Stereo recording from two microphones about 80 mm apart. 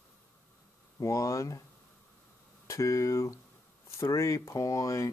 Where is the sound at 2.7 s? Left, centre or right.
Left.